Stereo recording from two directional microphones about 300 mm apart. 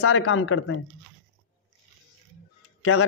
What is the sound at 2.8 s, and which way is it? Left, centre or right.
Speech, left.